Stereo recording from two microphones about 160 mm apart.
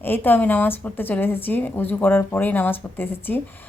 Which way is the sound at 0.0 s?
10° left (ahead or behind).